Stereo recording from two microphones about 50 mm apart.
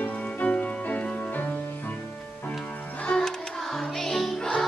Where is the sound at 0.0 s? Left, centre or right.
Left.